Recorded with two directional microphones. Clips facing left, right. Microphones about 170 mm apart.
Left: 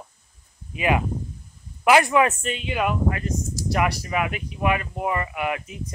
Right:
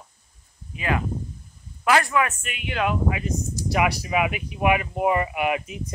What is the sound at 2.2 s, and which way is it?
Speech, 35° left (ahead or behind).